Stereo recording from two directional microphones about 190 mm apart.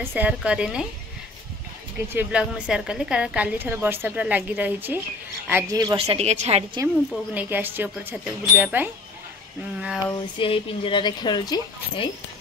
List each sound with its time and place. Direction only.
0.0 s a woman's voice: 10° right (ahead or behind)
2.1 s a woman's voice: 5° right (ahead or behind); by 6.8 s 35° right (ahead or behind)
7.3 s a woman's voice: 10° right (ahead or behind)
10.1 s speech: 30° left (ahead or behind)